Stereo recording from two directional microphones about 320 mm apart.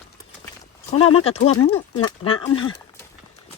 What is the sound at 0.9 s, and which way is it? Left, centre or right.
Speech, left.